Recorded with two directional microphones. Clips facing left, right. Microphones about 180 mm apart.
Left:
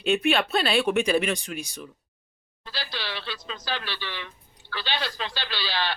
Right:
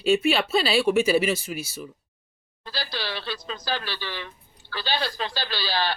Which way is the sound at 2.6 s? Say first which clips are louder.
Right 3 dB; 40° right (ahead or behind).